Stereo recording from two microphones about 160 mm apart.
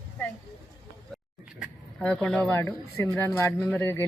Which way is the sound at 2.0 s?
10° left (ahead or behind).